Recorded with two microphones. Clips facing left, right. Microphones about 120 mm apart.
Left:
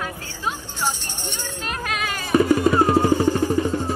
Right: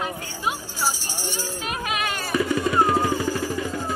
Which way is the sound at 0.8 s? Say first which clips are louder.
Left 1 dB; 5° right (ahead or behind).